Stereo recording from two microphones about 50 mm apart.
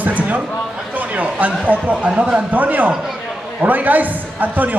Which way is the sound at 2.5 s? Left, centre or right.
Right.